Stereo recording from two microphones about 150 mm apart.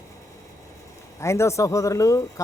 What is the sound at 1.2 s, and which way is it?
Speech, 20° left (ahead or behind).